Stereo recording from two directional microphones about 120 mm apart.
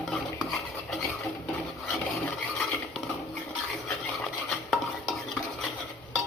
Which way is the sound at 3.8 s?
5° left (ahead or behind).